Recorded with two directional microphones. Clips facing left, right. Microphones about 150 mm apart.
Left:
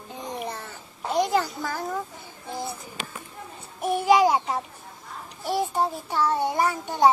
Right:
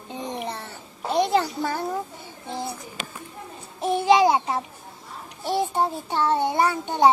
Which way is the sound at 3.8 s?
25° right (ahead or behind).